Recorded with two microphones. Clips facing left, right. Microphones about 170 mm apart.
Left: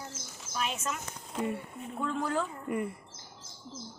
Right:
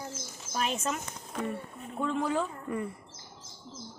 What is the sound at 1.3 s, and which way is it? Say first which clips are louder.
Speech: left 1 dB; 15° left (ahead or behind).